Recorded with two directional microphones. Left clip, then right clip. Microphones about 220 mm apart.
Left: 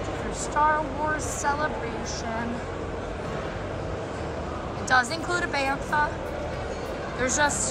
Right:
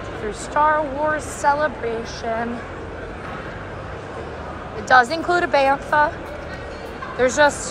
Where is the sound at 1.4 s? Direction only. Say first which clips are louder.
Right 9 dB; 5° left (ahead or behind).